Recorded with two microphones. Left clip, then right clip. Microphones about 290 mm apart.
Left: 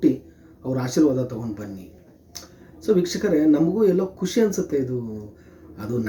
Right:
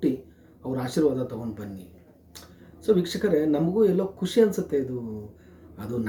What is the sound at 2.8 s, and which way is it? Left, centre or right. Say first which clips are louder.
Speech: left 2 dB; centre.